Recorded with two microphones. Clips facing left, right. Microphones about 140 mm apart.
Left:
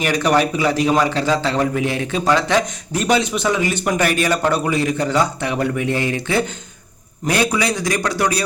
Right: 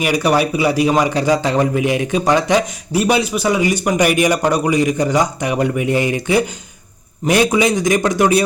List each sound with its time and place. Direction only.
0.0 s a man's voice: 10° right (ahead or behind)